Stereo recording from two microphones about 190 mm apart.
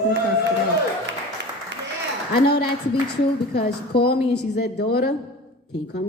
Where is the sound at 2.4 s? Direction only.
60° left (ahead or behind).